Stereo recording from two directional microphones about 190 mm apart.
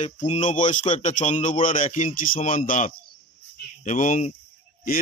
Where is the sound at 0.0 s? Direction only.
40° left (ahead or behind).